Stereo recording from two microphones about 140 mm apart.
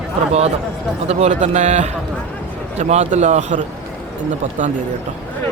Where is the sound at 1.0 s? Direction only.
55° right (ahead or behind).